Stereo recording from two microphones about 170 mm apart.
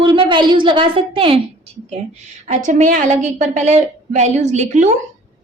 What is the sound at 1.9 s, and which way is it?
A woman's voice, 45° right (ahead or behind).